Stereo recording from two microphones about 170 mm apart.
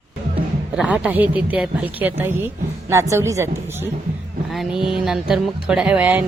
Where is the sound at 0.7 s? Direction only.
5° right (ahead or behind).